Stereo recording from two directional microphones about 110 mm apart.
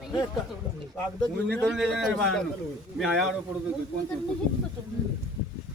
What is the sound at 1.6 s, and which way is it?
A man's voice, centre (ahead or behind).